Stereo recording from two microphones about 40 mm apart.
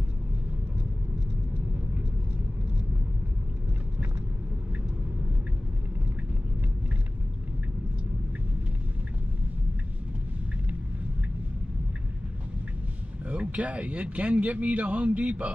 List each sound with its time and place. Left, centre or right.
13.3 s speech: right